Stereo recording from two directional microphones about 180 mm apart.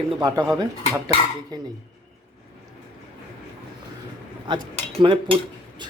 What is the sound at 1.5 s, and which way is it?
Speech, 25° right (ahead or behind).